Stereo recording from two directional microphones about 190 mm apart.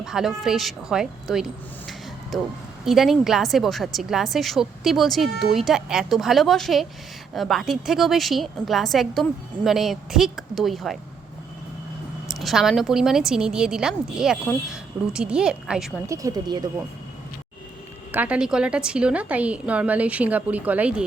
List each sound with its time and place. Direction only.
0.0 s a woman's voice: centre (ahead or behind)
2.8 s a woman's voice: centre (ahead or behind)
12.3 s a woman's voice: centre (ahead or behind)
16.0 s speech: 15° right (ahead or behind)
18.1 s a woman's voice: 10° right (ahead or behind)